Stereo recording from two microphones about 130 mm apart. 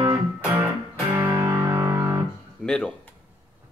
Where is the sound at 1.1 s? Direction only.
15° right (ahead or behind).